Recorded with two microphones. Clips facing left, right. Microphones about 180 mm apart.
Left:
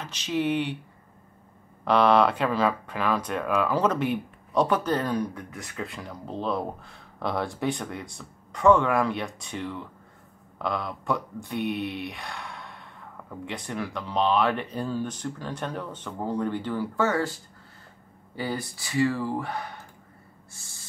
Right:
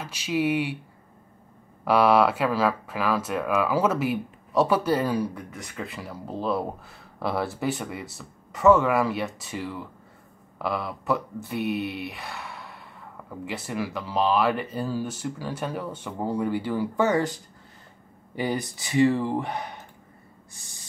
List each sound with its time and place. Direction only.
0.0 s speech: 10° right (ahead or behind)
1.9 s speech: 5° right (ahead or behind)
20.5 s owl: 15° right (ahead or behind)